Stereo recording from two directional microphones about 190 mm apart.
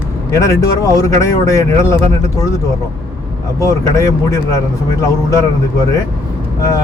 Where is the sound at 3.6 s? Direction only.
15° left (ahead or behind).